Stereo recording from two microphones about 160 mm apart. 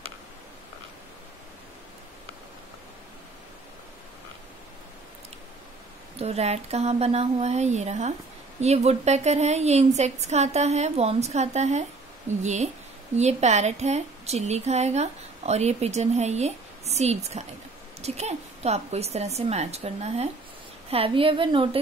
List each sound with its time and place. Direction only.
6.1 s a woman's voice: 40° right (ahead or behind)